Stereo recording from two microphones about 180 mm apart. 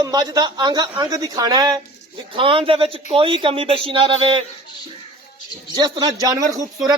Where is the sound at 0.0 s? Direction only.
20° right (ahead or behind).